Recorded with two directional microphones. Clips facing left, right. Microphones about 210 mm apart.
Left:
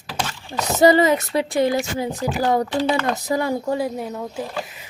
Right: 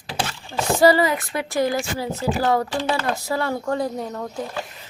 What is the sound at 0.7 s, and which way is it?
Speech, 20° left (ahead or behind).